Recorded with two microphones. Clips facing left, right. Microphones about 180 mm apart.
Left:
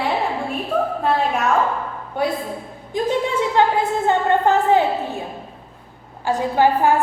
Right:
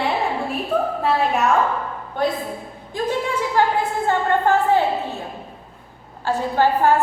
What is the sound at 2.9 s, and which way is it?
A woman's voice, 25° left (ahead or behind).